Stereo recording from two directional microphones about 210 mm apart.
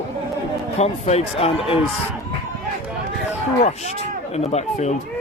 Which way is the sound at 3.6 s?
30° left (ahead or behind).